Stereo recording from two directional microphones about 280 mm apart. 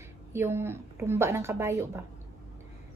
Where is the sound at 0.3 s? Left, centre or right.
Centre.